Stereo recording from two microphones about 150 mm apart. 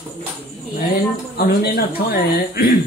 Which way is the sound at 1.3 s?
90° left.